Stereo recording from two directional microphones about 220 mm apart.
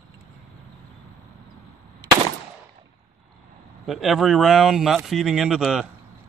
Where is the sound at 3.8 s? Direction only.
Centre (ahead or behind).